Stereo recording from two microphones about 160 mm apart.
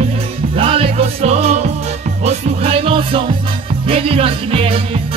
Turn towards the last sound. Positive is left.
turn(degrees=-35)  # may be behind; listen again after turning